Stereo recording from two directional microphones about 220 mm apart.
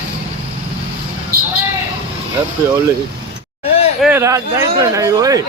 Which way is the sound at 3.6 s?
25° left (ahead or behind).